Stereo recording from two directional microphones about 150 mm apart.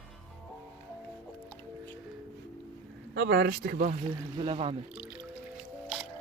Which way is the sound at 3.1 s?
90° right.